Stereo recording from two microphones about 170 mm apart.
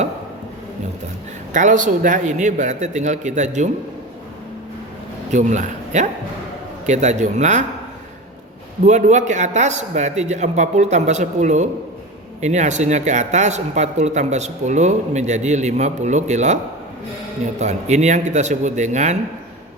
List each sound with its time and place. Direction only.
1.5 s speech: 45° right (ahead or behind)
5.3 s a man's voice: 45° right (ahead or behind)
8.8 s speech: 45° right (ahead or behind)
17.6 s speech: 45° right (ahead or behind)